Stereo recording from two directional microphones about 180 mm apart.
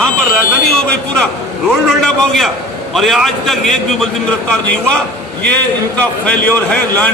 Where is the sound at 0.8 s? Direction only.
5° left (ahead or behind).